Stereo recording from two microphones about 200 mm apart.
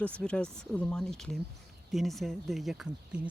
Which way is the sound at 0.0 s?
5° left (ahead or behind).